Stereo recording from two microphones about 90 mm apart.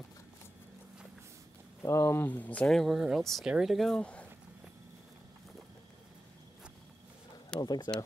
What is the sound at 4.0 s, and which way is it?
Speech, 15° left (ahead or behind).